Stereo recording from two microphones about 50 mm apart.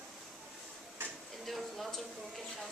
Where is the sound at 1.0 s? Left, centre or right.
Right.